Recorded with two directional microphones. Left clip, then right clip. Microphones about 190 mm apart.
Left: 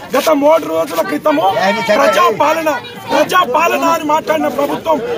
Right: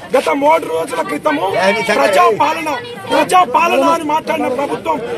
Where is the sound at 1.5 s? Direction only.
60° right (ahead or behind).